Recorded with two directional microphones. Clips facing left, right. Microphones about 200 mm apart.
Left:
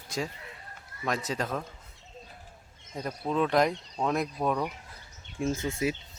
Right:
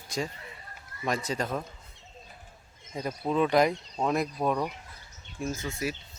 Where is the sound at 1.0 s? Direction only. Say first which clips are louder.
Right 1 dB; centre (ahead or behind).